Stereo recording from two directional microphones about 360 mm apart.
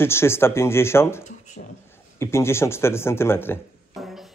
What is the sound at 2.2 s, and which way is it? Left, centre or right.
Speech, centre.